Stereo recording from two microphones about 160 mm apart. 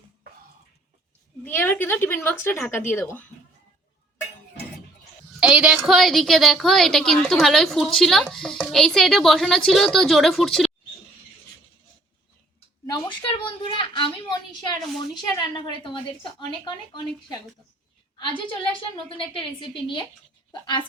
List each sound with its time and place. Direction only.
1.5 s speech: 15° left (ahead or behind)
5.4 s a woman's voice: 5° right (ahead or behind)
12.8 s a sound: 30° left (ahead or behind)
15.2 s a woman's voice: 30° left (ahead or behind)